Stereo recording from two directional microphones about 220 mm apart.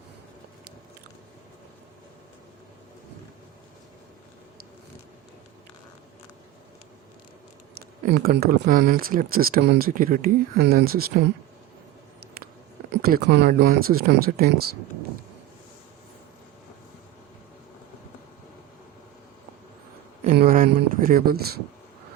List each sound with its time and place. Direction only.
8.0 s speech: 40° right (ahead or behind)
12.9 s speech: 45° right (ahead or behind)
20.2 s a sound: 40° right (ahead or behind)